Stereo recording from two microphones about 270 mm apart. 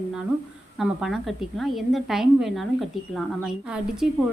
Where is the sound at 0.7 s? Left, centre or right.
Centre.